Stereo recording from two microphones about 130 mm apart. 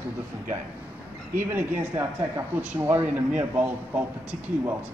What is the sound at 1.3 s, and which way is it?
Speech, 20° right (ahead or behind).